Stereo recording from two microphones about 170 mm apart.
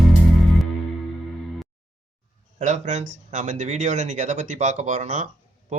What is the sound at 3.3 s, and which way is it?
Speech, 45° right (ahead or behind).